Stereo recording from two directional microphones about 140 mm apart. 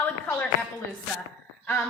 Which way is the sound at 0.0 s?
15° left (ahead or behind).